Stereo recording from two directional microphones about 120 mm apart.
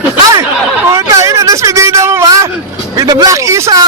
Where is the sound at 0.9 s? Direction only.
25° right (ahead or behind).